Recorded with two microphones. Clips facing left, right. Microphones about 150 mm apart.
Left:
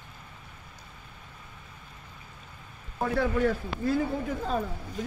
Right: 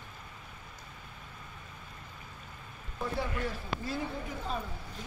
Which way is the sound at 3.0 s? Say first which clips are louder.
Left 9 dB; 75° left (ahead or behind).